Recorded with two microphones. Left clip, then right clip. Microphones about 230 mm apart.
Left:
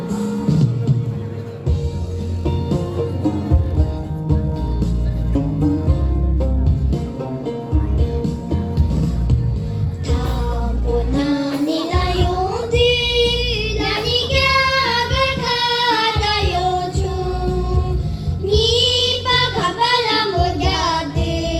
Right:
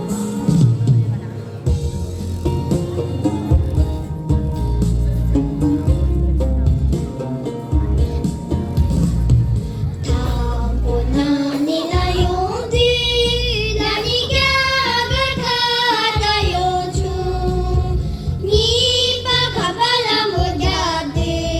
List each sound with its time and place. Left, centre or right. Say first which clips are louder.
0.1 s music: left 1 dB; right
2.4 s music: right 2 dB; right
8.2 s music: even; right
10.9 s child singing: right 1 dB; right